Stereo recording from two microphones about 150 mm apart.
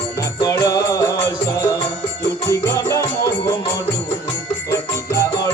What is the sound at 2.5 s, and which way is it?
Music, 20° left (ahead or behind).